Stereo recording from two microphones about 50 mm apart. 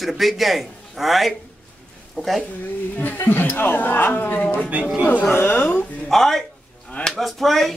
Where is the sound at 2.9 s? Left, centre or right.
Left.